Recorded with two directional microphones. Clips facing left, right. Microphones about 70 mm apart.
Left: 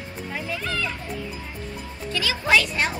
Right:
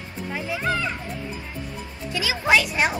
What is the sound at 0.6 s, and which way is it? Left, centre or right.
Music, right.